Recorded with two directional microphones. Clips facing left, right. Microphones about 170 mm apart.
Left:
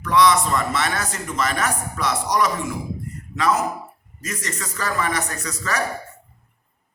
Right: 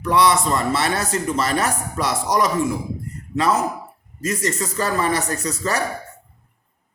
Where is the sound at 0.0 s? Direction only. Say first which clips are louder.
Even; 30° right (ahead or behind).